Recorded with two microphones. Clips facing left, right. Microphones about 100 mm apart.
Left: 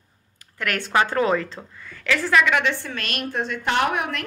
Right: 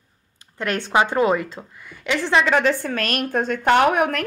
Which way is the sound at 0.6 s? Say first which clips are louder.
Right 2 dB; 20° right (ahead or behind).